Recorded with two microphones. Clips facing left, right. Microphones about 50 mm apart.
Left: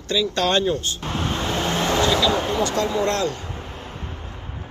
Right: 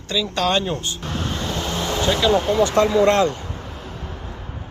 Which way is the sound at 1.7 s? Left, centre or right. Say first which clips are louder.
Left 4 dB; left.